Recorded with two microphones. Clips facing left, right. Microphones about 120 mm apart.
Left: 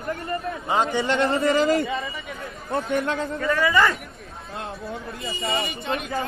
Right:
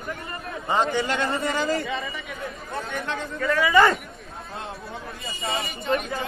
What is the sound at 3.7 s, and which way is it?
Speech, 25° right (ahead or behind).